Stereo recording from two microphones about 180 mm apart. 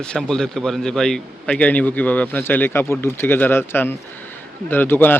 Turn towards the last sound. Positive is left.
turn(degrees=10)  # may be behind; listen again after turning